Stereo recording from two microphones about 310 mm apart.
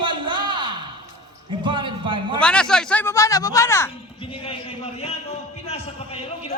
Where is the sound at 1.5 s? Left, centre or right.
Centre.